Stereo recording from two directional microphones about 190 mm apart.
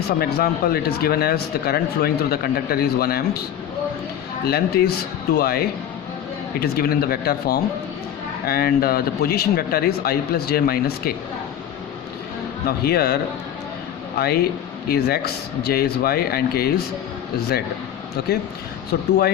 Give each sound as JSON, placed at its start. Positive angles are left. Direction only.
{"t": 0.2, "sound": "speech", "side_deg": 55}
{"t": 4.4, "sound": "speech", "side_deg": 55}
{"t": 12.6, "sound": "speech", "side_deg": 55}
{"t": 14.2, "sound": "speech", "side_deg": 55}